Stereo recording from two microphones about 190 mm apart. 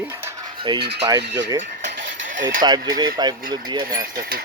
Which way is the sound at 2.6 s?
20° right (ahead or behind).